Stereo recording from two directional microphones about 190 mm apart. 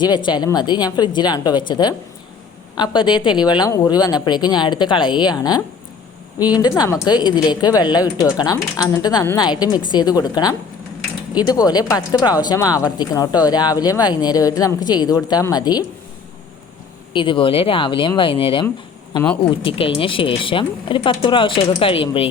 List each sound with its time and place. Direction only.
0.0 s speech: 25° left (ahead or behind)
17.2 s speech: 25° left (ahead or behind)